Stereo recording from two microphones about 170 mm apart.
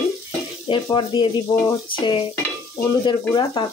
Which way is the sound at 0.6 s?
30° left (ahead or behind).